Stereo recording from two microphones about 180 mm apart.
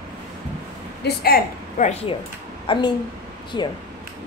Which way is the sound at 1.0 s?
55° left (ahead or behind).